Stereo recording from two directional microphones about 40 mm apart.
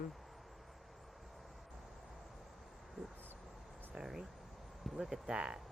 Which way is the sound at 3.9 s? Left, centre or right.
Centre.